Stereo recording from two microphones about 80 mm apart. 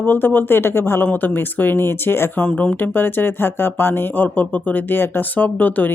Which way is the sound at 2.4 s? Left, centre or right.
Centre.